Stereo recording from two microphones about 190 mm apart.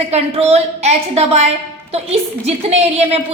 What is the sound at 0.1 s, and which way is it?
A woman's voice, 35° right (ahead or behind).